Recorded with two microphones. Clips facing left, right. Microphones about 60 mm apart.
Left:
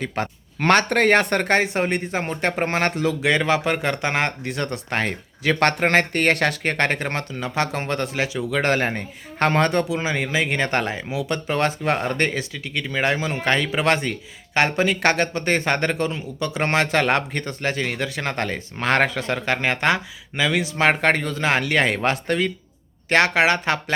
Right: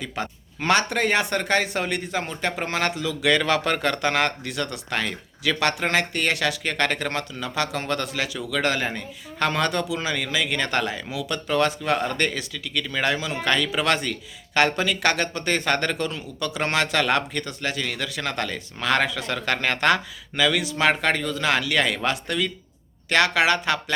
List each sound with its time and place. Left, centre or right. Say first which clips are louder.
0.0 s speech: left 4 dB; left
1.5 s speech: left 2 dB; left
3.2 s speech: right 1 dB; left